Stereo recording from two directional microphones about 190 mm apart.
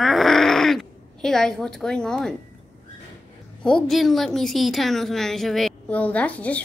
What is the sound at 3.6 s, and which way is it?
A woman's voice, 5° left (ahead or behind).